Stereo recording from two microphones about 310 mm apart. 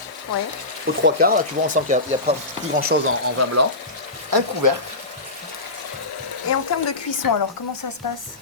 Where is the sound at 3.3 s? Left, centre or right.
Right.